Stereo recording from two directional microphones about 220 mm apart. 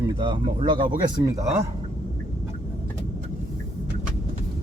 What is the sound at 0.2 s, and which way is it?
Speech, 20° right (ahead or behind).